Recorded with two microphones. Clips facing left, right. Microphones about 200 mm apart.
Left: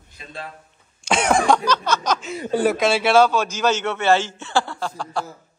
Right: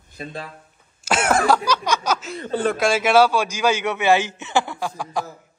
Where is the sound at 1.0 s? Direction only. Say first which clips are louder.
Left 1 dB; 5° right (ahead or behind).